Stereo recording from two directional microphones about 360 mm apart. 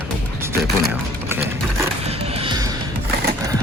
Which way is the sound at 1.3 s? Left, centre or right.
Centre.